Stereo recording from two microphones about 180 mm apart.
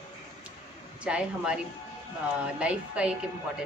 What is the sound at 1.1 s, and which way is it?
A man's voice, 5° right (ahead or behind).